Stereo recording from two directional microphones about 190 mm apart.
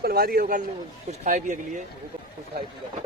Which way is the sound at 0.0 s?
50° right (ahead or behind).